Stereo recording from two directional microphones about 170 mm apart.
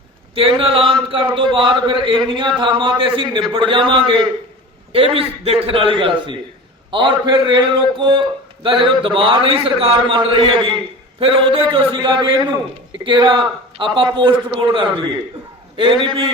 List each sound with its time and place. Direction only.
0.3 s a man's voice: 30° right (ahead or behind)